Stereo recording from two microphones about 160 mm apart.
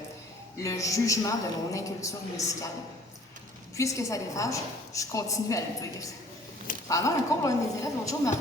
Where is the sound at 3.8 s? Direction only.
20° left (ahead or behind).